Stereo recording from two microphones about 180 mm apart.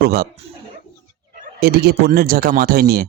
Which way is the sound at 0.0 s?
60° right (ahead or behind).